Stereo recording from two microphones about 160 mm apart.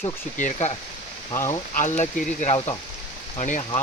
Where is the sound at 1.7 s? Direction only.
50° left (ahead or behind).